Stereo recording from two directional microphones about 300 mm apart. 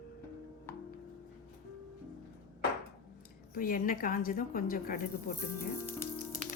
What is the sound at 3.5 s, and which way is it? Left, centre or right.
Speech, left.